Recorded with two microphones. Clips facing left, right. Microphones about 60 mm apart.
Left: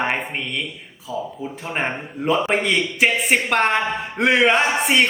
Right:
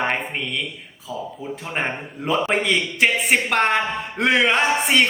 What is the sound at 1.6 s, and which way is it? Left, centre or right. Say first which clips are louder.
A man's voice: left 1 dB; centre.